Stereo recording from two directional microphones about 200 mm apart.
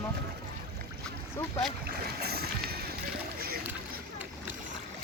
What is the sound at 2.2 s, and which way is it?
Boat, 50° right (ahead or behind).